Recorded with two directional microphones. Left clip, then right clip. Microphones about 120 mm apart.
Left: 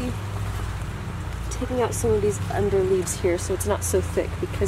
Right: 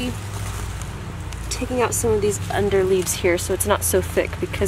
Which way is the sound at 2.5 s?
30° right (ahead or behind).